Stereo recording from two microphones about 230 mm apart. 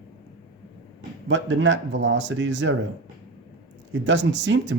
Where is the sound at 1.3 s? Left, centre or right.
Right.